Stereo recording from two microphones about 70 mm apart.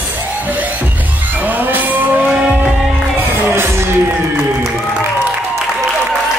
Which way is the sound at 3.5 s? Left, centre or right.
Right.